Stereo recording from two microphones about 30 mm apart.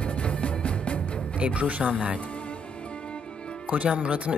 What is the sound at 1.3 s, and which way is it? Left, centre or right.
Speech, right.